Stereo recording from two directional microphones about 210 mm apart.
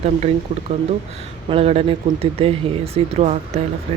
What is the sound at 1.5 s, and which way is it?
Speech, 30° right (ahead or behind).